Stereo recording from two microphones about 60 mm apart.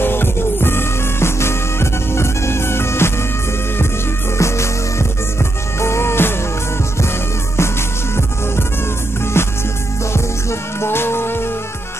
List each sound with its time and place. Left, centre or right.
0.0 s music: left
4.4 s music: left
9.2 s music: left
10.8 s music: left